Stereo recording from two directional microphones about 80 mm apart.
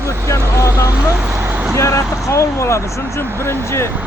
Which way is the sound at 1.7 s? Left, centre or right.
Left.